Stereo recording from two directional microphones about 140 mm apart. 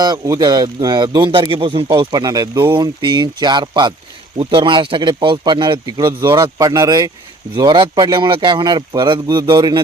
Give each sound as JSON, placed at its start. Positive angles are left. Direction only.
{"t": 0.0, "sound": "speech", "side_deg": -30}